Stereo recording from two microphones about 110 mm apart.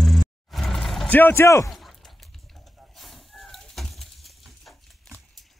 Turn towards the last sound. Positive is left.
turn(degrees=0)  # may be behind; listen again after turning